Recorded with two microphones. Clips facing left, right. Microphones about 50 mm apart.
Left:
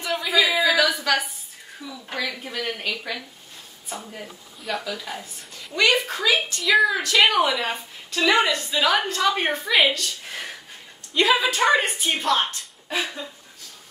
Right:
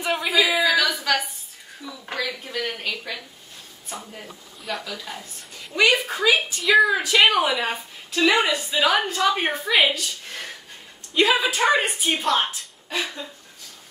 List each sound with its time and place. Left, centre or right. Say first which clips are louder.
0.0 s a sound: right 2 dB; centre
0.3 s a sound: even; centre
2.1 s a woman's voice: right 1 dB; centre
4.1 s a woman's voice: left 1 dB; centre
5.8 s a woman's voice: right 1 dB; centre
10.2 s a woman's voice: left 1 dB; centre
12.9 s speech: left 1 dB; centre